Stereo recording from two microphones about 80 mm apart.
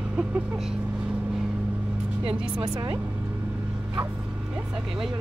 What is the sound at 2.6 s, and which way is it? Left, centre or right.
Speech, right.